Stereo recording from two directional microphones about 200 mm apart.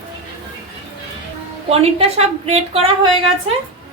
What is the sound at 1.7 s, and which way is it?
A woman's voice, 30° right (ahead or behind).